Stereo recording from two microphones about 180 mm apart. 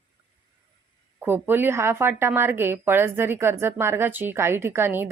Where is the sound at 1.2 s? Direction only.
10° right (ahead or behind).